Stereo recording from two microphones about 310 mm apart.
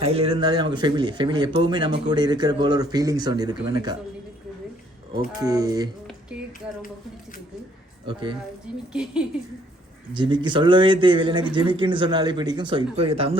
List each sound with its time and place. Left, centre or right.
0.0 s speech: centre
5.4 s speech: centre
8.0 s speech: centre
8.9 s speech: centre
10.2 s speech: centre